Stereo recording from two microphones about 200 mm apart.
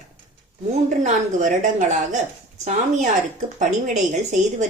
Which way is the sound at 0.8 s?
40° right (ahead or behind).